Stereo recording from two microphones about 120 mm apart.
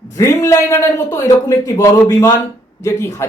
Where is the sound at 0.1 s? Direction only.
25° left (ahead or behind).